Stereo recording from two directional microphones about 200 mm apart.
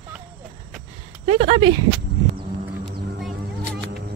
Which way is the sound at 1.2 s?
30° right (ahead or behind).